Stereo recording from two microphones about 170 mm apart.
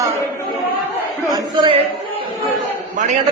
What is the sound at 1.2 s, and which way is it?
Speech, 25° right (ahead or behind).